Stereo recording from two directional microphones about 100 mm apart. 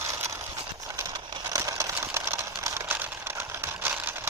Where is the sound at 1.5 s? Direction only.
35° right (ahead or behind).